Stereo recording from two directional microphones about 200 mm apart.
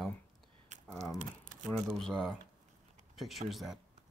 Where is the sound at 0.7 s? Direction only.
35° right (ahead or behind).